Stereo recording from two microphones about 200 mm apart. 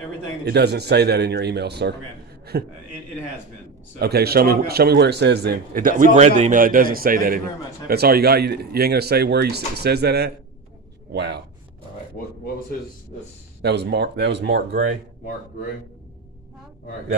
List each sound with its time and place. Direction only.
0.5 s a man's voice: 55° right (ahead or behind)
4.0 s a man's voice: 50° right (ahead or behind)
13.6 s a man's voice: 55° right (ahead or behind)